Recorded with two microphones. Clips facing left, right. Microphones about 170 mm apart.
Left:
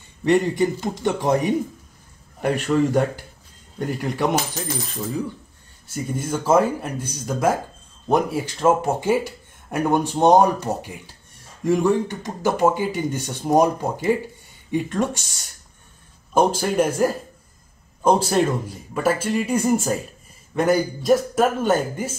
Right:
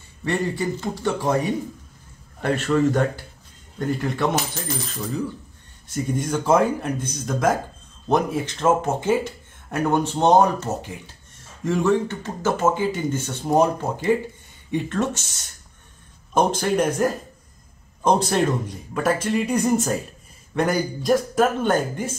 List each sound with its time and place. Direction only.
0.2 s speech: 20° left (ahead or behind)
5.9 s a man's voice: 5° left (ahead or behind)
16.3 s a man's voice: 5° left (ahead or behind)